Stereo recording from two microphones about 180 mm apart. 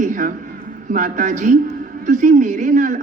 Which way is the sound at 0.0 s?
45° right (ahead or behind).